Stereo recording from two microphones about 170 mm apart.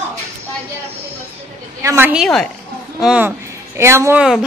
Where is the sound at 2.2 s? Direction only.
5° left (ahead or behind); by 4.2 s 15° right (ahead or behind).